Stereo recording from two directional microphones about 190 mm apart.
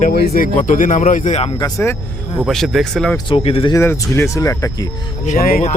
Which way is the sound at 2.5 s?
Centre (ahead or behind).